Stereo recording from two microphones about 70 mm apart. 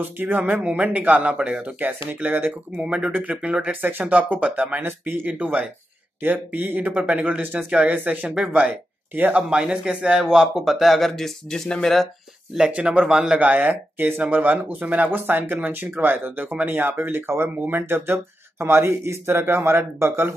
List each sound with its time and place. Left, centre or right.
0.0 s speech: right
2.8 s speech: centre
4.8 s speech: right
5.2 s speech: centre
9.5 s a man's voice: centre
12.5 s speech: centre; by 20.3 s right